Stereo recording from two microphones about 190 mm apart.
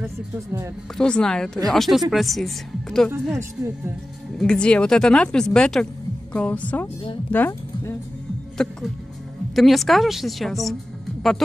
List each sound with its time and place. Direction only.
0.0 s speech: 15° right (ahead or behind)
0.9 s speech: 5° left (ahead or behind)
3.3 s speech: 15° right (ahead or behind)
4.4 s speech: 5° left (ahead or behind)